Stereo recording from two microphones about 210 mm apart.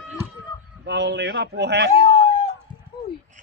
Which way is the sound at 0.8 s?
55° right (ahead or behind).